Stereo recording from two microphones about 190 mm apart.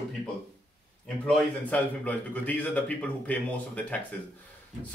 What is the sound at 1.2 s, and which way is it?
A man's voice, 5° left (ahead or behind).